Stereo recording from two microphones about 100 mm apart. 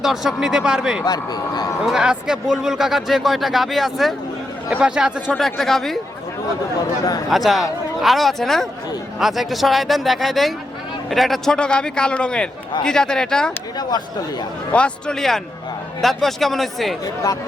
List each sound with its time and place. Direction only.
0.0 s speech: 5° right (ahead or behind)
1.0 s speech: 45° left (ahead or behind)
1.8 s a man's voice: 5° right (ahead or behind)
7.3 s a man's voice: centre (ahead or behind)
14.7 s a man's voice: 10° left (ahead or behind)